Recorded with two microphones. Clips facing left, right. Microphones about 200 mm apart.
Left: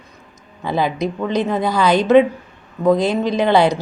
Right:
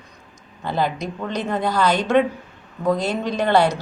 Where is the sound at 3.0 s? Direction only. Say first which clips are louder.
Left 5 dB; 10° left (ahead or behind).